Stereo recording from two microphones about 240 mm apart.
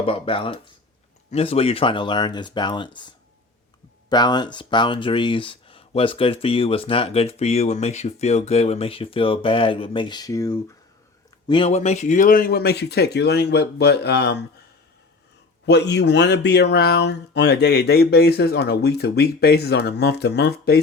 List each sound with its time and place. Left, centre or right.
0.0 s speech: left
15.6 s speech: left